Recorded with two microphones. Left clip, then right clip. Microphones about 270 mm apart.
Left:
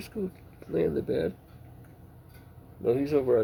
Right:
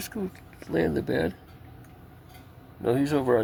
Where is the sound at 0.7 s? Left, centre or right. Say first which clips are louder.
Right 1 dB; right.